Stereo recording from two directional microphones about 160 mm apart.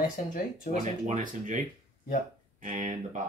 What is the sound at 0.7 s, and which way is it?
Speech, 50° left (ahead or behind).